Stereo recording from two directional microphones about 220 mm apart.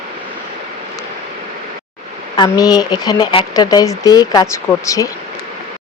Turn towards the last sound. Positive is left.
turn(degrees=15)  # may be behind; listen again after turning